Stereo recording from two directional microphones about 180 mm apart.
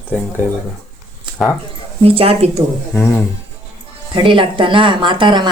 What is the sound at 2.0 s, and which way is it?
Speech, 30° right (ahead or behind).